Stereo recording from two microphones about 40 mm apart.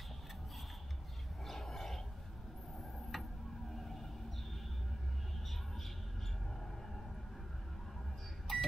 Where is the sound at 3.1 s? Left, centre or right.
Centre.